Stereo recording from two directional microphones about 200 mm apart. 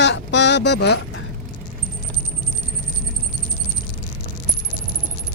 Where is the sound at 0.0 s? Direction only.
60° left (ahead or behind).